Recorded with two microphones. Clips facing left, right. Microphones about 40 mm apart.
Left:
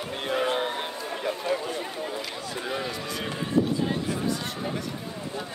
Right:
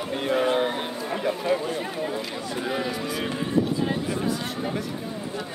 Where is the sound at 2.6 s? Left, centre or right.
Centre.